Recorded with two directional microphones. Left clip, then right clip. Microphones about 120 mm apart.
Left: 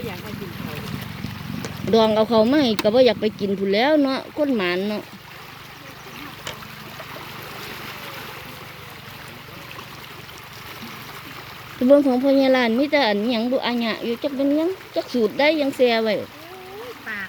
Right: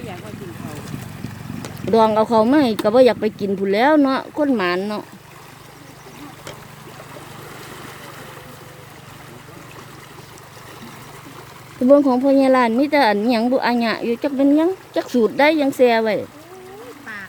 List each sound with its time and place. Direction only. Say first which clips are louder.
1.9 s a woman's voice: right 2 dB; 10° right (ahead or behind)
11.9 s a woman's voice: right 2 dB; 10° right (ahead or behind)
14.3 s speech: right 5 dB; 35° right (ahead or behind)
15.4 s a woman's voice: right 3 dB; 20° right (ahead or behind)